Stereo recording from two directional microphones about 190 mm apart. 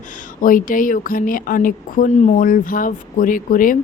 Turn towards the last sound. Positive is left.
turn(degrees=45)  # may be behind; listen again after turning